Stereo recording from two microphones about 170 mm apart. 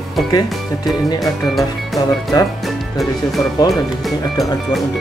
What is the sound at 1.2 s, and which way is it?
Speech, centre (ahead or behind).